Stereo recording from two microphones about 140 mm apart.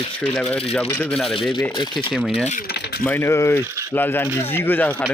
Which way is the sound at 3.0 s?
15° left (ahead or behind).